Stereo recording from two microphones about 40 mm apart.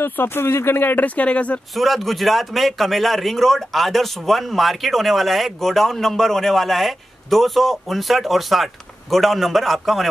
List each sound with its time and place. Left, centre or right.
0.0 s speech: left
0.9 s speech: left
1.8 s a man's voice: centre